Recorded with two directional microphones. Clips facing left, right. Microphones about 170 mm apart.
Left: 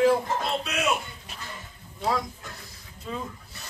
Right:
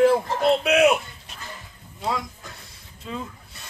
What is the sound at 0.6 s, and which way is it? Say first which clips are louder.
Speech: right 11 dB; 65° right (ahead or behind).